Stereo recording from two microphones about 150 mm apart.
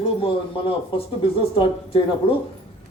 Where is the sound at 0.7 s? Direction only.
40° left (ahead or behind).